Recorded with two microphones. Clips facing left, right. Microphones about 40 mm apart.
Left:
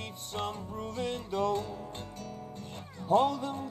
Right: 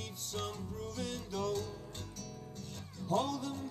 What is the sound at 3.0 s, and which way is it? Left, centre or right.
Music, left.